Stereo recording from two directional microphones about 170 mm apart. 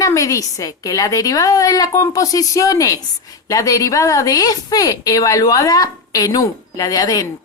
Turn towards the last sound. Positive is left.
turn(degrees=20)  # may be behind; listen again after turning